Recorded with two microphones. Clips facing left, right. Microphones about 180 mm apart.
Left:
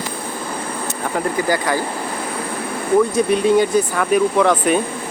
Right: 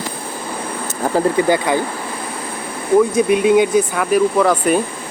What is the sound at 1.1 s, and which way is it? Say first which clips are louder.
Speech: right 5 dB; 20° right (ahead or behind).